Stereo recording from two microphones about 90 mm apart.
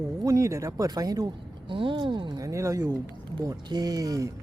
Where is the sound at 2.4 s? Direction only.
35° right (ahead or behind).